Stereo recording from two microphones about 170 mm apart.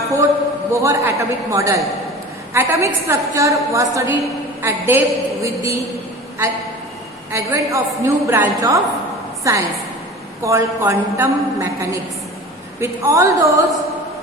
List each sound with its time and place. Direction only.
0.7 s a woman's voice: 15° right (ahead or behind)
7.3 s a woman's voice: 15° right (ahead or behind)